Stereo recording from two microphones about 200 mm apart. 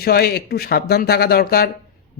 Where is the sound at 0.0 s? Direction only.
50° left (ahead or behind).